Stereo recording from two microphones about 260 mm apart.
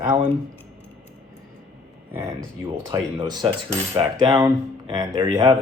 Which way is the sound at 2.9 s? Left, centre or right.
Centre.